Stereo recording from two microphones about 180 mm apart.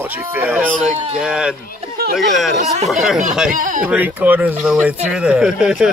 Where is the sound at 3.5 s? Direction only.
45° right (ahead or behind).